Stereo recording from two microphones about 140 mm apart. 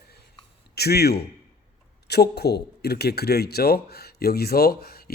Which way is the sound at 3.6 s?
90° left.